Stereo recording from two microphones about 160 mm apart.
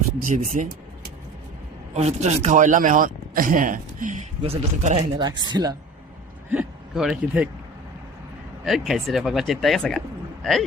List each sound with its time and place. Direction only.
0.2 s speech: 60° right (ahead or behind)
1.9 s speech: 45° right (ahead or behind)
4.4 s speech: 40° right (ahead or behind)
5.1 s speech: 25° right (ahead or behind)
6.5 s speech: 5° right (ahead or behind)
8.6 s speech: centre (ahead or behind)